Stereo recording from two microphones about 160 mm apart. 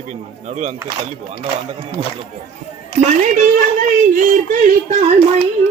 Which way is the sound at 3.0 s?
50° right (ahead or behind).